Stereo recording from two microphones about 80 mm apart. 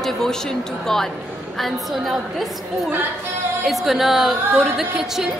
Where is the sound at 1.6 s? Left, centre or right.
Centre.